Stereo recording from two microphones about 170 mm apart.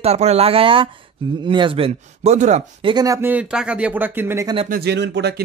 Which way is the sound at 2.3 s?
45° right (ahead or behind).